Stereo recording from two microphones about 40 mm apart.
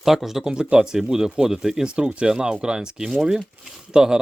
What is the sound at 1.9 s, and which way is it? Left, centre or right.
Speech, right.